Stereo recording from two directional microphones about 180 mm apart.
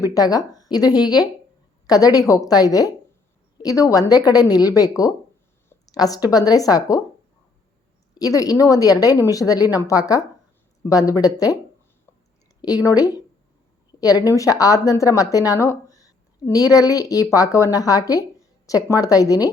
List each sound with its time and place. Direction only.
0.0 s a woman's voice: 20° left (ahead or behind)
8.1 s a woman's voice: 20° left (ahead or behind)
12.6 s a woman's voice: 20° left (ahead or behind)